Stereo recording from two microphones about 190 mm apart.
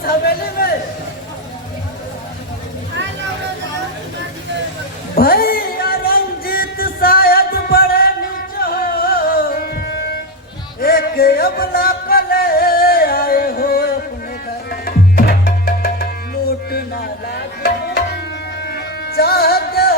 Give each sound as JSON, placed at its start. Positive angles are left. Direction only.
{"t": 0.0, "sound": "a sound", "side_deg": 55}
{"t": 5.1, "sound": "music", "side_deg": 50}
{"t": 14.7, "sound": "tabla", "side_deg": 55}
{"t": 18.6, "sound": "music", "side_deg": 60}